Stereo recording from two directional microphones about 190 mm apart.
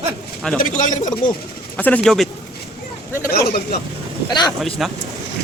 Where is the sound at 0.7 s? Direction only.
40° left (ahead or behind).